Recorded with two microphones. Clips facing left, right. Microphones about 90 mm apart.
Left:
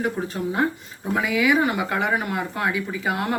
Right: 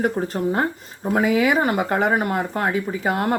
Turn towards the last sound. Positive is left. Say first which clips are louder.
# right 3 dB
turn(degrees=-45)  # may be behind; listen again after turning